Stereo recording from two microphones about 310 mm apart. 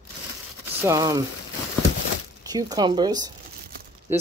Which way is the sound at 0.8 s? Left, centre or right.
Centre.